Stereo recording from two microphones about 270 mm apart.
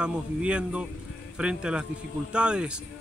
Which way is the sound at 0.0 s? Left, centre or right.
Centre.